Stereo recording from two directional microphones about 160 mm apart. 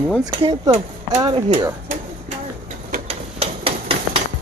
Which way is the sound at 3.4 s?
35° right (ahead or behind).